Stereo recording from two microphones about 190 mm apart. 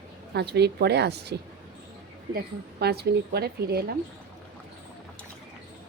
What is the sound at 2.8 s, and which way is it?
A woman's voice, 55° right (ahead or behind).